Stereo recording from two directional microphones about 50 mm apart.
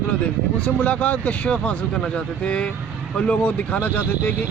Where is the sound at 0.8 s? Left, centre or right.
Left.